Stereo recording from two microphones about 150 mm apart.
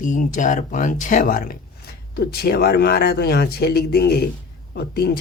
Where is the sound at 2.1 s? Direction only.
90° left.